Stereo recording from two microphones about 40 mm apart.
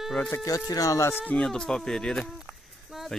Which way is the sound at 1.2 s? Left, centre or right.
Left.